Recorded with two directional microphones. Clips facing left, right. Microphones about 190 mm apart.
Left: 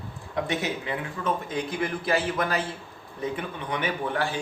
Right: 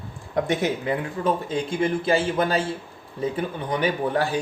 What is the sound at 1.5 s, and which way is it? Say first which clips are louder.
A man's voice: right 5 dB; 25° right (ahead or behind).